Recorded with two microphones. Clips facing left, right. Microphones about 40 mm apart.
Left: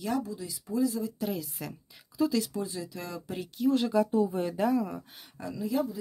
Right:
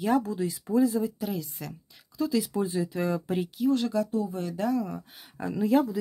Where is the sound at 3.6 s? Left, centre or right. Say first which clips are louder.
Left 1 dB; centre.